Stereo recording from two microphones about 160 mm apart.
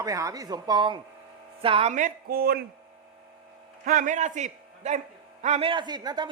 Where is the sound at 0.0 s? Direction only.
20° right (ahead or behind).